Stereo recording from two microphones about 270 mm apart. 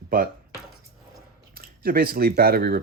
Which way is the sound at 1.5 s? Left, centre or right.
Right.